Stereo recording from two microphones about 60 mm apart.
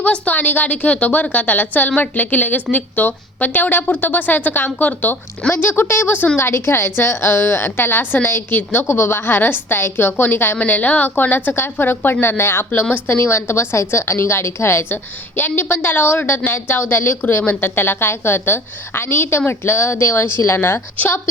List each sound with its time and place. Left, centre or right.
0.0 s a woman's voice: left
8.9 s a woman's voice: left
15.4 s a woman's voice: left